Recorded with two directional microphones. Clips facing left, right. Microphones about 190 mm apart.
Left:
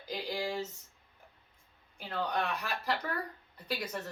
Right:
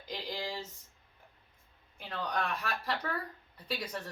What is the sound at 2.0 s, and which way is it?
Speech, centre (ahead or behind).